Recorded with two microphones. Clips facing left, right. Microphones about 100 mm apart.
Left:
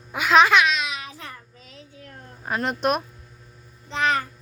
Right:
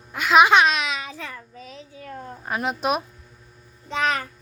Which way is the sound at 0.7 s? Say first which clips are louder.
Right 1 dB; 70° right (ahead or behind).